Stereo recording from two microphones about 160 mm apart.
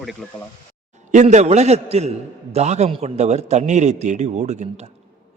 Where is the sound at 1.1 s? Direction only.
45° right (ahead or behind).